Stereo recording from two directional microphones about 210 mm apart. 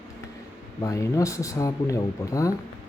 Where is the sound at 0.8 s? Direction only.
15° left (ahead or behind).